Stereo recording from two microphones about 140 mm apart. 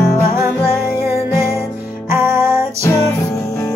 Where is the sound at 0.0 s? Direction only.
20° left (ahead or behind).